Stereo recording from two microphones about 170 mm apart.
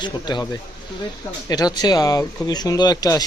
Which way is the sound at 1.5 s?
25° left (ahead or behind).